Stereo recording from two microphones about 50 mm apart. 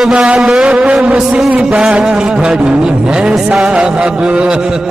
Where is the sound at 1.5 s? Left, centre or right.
Right.